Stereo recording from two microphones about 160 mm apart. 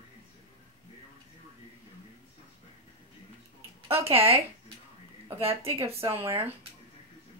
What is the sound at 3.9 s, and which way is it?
Speech, 15° right (ahead or behind).